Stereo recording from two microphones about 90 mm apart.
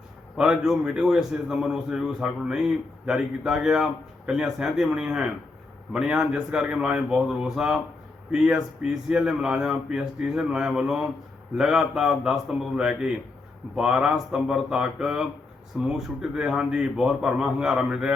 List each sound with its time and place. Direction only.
0.3 s a man's voice: 5° right (ahead or behind)